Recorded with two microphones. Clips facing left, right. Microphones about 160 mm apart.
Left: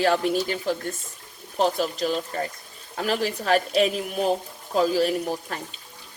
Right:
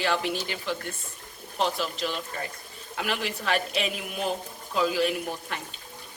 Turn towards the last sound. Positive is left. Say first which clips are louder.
# left 4 dB
turn(degrees=40)  # may be behind; listen again after turning